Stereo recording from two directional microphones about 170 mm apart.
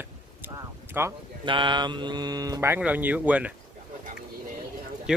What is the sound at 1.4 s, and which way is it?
Speech, 30° right (ahead or behind).